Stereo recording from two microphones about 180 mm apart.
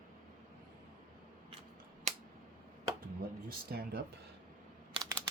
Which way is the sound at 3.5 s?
60° right (ahead or behind).